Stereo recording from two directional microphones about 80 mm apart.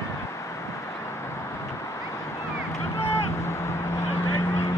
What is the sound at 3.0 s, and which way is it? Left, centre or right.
Vehicle, left.